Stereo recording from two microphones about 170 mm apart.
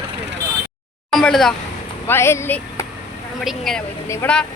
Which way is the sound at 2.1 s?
15° left (ahead or behind).